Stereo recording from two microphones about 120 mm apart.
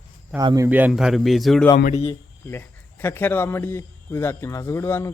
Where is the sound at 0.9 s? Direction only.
5° right (ahead or behind).